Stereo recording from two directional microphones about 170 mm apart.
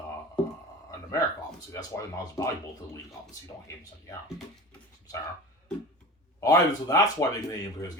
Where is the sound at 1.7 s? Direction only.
20° left (ahead or behind).